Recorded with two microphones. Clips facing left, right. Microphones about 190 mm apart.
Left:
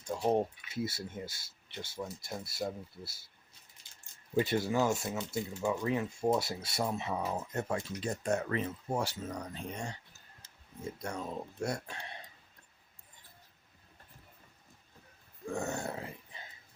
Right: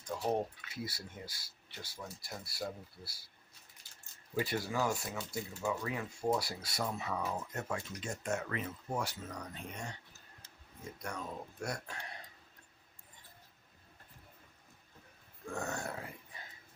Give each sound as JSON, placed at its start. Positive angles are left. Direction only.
{"t": 0.2, "sound": "speech", "side_deg": 20}
{"t": 4.4, "sound": "speech", "side_deg": 25}
{"t": 11.0, "sound": "speech", "side_deg": 25}
{"t": 15.5, "sound": "groan", "side_deg": 25}